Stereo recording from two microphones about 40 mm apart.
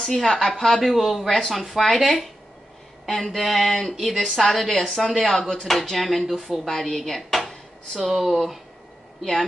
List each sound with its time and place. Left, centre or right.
0.1 s speech: centre